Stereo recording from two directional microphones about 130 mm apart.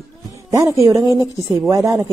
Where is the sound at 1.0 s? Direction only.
25° left (ahead or behind).